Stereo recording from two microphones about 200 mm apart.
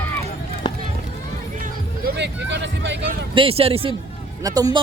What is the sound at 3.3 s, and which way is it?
Speech, 25° right (ahead or behind).